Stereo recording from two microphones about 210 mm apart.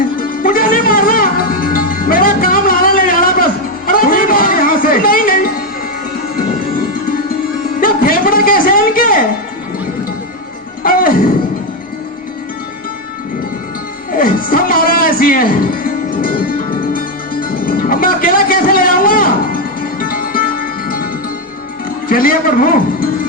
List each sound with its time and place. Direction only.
0.2 s music: 40° left (ahead or behind)
7.8 s a sound: 45° left (ahead or behind)
10.8 s music: 45° left (ahead or behind)
14.1 s music: 40° left (ahead or behind)
22.1 s music: 40° left (ahead or behind)